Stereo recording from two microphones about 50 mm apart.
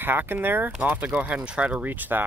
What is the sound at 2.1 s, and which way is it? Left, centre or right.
Speech, right.